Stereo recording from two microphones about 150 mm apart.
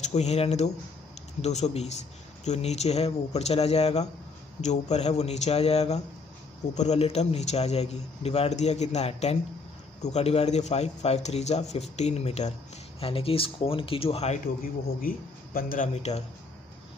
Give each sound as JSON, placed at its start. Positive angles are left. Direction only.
{"t": 0.0, "sound": "a man's voice", "side_deg": 50}
{"t": 14.6, "sound": "a man's voice", "side_deg": 70}
{"t": 15.9, "sound": "a man's voice", "side_deg": 45}